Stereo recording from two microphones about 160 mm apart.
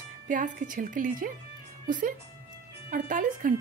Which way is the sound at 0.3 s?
55° right (ahead or behind).